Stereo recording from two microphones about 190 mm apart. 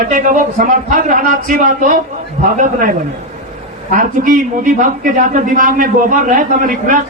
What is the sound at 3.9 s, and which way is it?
A man's voice, 45° right (ahead or behind).